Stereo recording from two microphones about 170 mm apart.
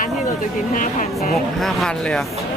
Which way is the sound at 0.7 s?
50° left (ahead or behind).